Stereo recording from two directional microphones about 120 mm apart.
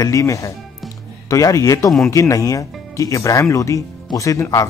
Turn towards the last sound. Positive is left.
turn(degrees=25)  # may be behind; listen again after turning